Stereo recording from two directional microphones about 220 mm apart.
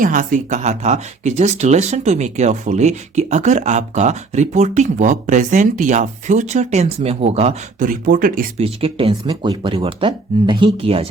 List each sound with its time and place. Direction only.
0.0 s speech: 35° right (ahead or behind)
8.6 s speech: 25° right (ahead or behind)